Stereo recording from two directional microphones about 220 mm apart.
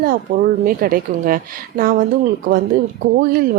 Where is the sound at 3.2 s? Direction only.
40° right (ahead or behind).